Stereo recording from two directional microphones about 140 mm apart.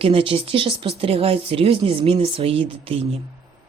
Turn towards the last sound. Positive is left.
turn(degrees=-45)  # may be behind; listen again after turning